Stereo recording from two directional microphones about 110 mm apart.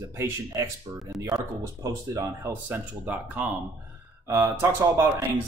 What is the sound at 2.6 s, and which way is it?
Speech, 15° right (ahead or behind).